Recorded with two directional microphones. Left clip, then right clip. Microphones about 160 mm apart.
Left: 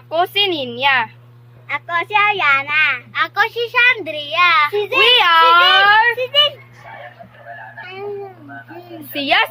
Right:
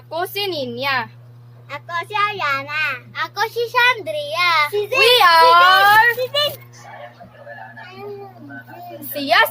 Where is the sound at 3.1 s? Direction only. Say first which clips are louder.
Left 2 dB; centre (ahead or behind).